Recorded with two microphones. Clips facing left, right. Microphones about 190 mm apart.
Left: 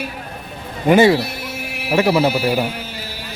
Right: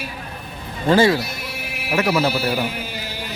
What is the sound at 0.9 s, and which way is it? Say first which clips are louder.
Speech: left 3 dB; 20° left (ahead or behind).